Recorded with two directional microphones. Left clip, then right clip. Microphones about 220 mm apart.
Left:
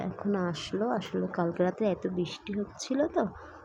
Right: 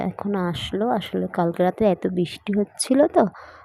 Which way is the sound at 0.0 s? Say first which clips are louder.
Right 6 dB; 15° right (ahead or behind).